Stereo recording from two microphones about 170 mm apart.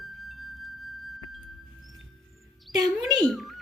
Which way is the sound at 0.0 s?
Centre (ahead or behind).